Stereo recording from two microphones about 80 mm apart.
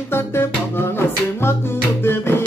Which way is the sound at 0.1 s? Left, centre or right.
Left.